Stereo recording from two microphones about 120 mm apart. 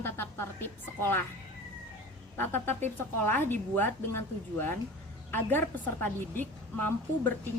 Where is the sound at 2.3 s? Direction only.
15° left (ahead or behind).